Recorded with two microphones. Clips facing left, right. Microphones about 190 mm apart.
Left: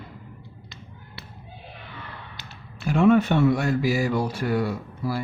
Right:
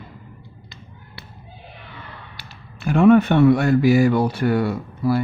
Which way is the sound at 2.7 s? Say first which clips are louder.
Right 5 dB; 55° right (ahead or behind).